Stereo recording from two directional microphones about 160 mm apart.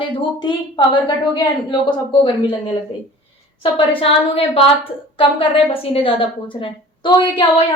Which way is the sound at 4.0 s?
35° left (ahead or behind).